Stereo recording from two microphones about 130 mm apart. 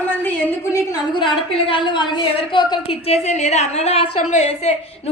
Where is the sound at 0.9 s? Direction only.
35° left (ahead or behind); by 4.7 s 55° left (ahead or behind).